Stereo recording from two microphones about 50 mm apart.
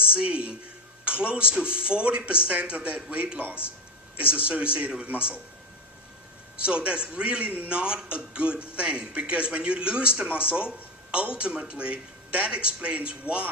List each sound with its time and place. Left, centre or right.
0.1 s a man's voice: right
6.6 s a man's voice: right